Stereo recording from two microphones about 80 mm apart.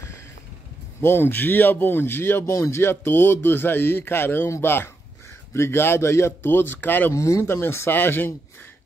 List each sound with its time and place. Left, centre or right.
1.0 s a man's voice: left
7.1 s speech: left